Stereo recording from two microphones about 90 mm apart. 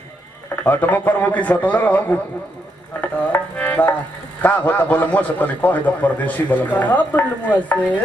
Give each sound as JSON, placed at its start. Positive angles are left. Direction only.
{"t": 0.7, "sound": "a man's voice", "side_deg": 20}
{"t": 3.3, "sound": "music", "side_deg": 15}
{"t": 4.4, "sound": "a man's voice", "side_deg": 15}